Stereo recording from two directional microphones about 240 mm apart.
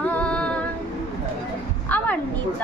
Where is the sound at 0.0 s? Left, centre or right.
Centre.